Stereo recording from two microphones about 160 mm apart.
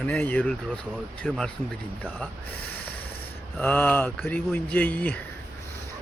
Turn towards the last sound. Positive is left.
turn(degrees=10)  # may be behind; listen again after turning